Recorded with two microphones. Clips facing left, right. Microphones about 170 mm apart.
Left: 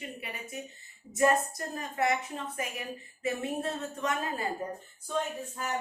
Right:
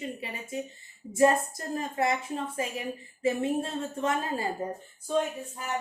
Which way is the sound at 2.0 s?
30° right (ahead or behind).